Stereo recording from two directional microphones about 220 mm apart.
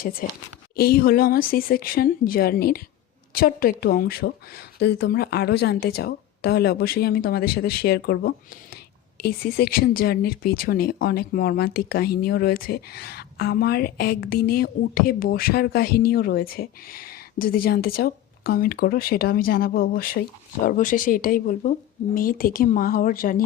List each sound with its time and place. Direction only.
0.0 s speech: 40° left (ahead or behind)